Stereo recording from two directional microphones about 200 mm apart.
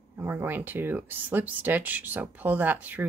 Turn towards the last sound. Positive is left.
turn(degrees=-10)  # may be behind; listen again after turning